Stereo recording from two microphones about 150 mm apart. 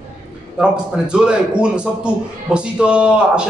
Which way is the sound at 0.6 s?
5° right (ahead or behind).